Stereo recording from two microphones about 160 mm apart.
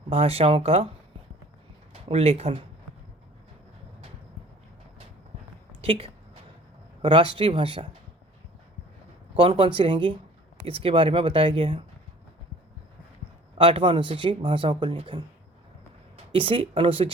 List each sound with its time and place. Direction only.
0.1 s speech: 35° right (ahead or behind)
1.9 s speech: 40° right (ahead or behind)
5.8 s speech: 35° right (ahead or behind)
9.3 s speech: 35° right (ahead or behind)
13.6 s speech: 35° right (ahead or behind)
16.3 s speech: 35° right (ahead or behind)